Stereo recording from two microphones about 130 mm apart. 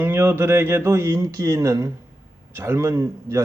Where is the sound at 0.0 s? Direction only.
15° right (ahead or behind).